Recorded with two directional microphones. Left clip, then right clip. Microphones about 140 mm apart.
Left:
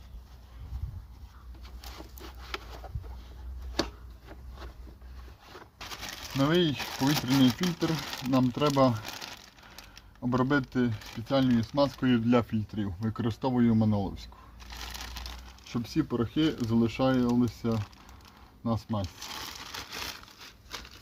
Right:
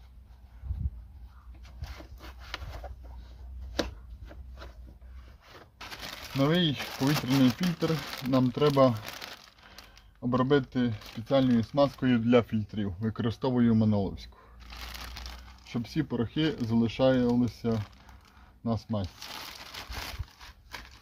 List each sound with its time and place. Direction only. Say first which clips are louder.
6.4 s speech: left 1 dB; 25° right (ahead or behind)
6.7 s speech: left 1 dB; 10° left (ahead or behind)
8.1 s speech: left 1 dB; 5° right (ahead or behind)
8.5 s speech: right 3 dB; 25° right (ahead or behind)
9.0 s crumpling: left 1 dB; 5° right (ahead or behind)
10.2 s speech: right 2 dB; 25° right (ahead or behind)
14.8 s a sound: left 1 dB; 5° left (ahead or behind)
15.7 s speech: left 2 dB; 25° right (ahead or behind)